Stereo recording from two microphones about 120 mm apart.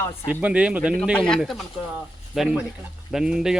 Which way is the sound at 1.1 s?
5° left (ahead or behind).